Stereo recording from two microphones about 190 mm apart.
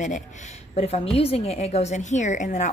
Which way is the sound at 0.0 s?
40° left (ahead or behind).